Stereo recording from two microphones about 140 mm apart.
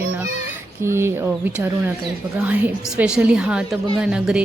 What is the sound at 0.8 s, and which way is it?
A woman's voice, 20° right (ahead or behind).